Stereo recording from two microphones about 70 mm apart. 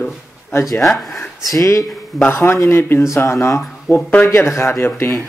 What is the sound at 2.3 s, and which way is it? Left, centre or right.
Speech, left.